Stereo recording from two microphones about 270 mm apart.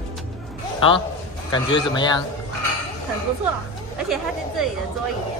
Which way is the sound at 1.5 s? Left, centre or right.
Centre.